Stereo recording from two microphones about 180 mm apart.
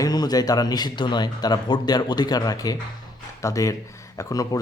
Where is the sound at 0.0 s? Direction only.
20° left (ahead or behind).